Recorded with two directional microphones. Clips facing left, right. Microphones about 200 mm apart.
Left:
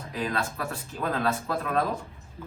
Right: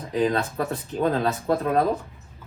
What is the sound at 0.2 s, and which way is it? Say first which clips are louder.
Speech: right 7 dB; 35° right (ahead or behind).